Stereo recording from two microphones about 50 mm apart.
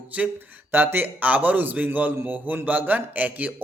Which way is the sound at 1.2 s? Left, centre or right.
Right.